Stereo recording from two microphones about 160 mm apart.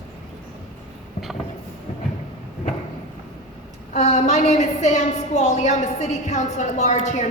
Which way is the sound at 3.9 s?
45° left (ahead or behind).